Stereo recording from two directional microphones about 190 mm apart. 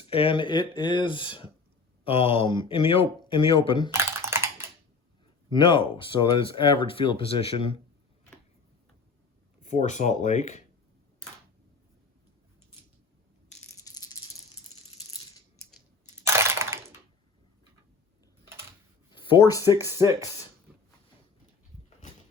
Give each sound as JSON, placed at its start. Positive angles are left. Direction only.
{"t": 0.1, "sound": "speech", "side_deg": 30}
{"t": 3.9, "sound": "computer keyboard", "side_deg": -15}
{"t": 5.5, "sound": "speech", "side_deg": 25}
{"t": 9.6, "sound": "speech", "side_deg": 40}
{"t": 13.8, "sound": "rattle", "side_deg": 20}
{"t": 16.0, "sound": "crushing", "side_deg": -15}
{"t": 19.1, "sound": "speech", "side_deg": 25}
{"t": 20.0, "sound": "speech", "side_deg": -15}